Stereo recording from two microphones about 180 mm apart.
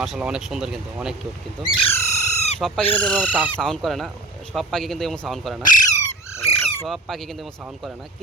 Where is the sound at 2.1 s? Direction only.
40° left (ahead or behind).